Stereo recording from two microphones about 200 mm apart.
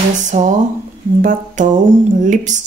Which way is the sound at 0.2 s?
35° right (ahead or behind).